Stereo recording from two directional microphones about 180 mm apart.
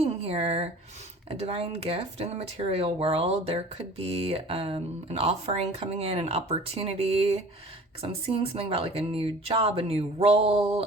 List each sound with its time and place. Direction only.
0.0 s speech: 35° right (ahead or behind)